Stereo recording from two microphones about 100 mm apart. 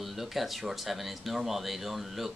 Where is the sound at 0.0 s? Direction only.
Centre (ahead or behind).